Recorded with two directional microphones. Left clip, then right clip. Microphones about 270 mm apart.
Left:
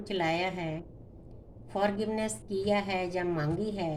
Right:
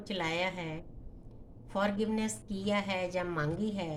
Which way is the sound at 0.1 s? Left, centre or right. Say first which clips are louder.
Left 3 dB; right.